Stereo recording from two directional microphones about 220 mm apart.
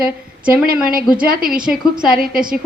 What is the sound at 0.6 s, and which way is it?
A woman's voice, 40° right (ahead or behind).